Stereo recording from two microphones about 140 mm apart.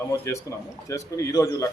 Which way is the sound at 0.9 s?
20° left (ahead or behind).